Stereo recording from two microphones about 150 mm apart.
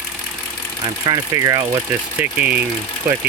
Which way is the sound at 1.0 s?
25° right (ahead or behind).